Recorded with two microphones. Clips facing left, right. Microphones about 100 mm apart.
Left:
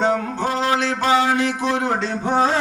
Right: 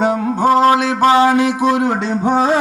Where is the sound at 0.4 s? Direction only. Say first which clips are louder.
Right 10 dB; 45° right (ahead or behind).